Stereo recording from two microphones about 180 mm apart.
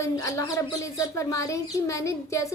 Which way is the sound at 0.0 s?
15° left (ahead or behind).